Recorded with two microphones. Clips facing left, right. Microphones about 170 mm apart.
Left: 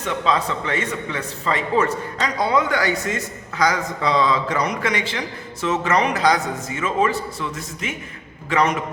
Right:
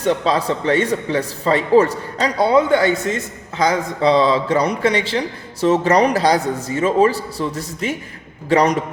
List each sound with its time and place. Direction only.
0.0 s a man's voice: 35° right (ahead or behind)